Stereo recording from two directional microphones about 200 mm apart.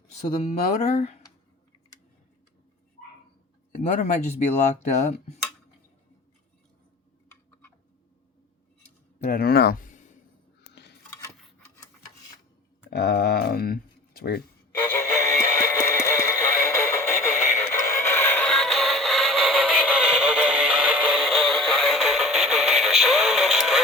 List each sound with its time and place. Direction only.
0.7 s speech: 35° left (ahead or behind)
3.8 s speech: 35° left (ahead or behind)
9.1 s speech: 45° left (ahead or behind)
10.6 s a sound: 55° left (ahead or behind)
12.9 s speech: 55° left (ahead or behind)
14.9 s music: 15° left (ahead or behind); by 23.8 s centre (ahead or behind)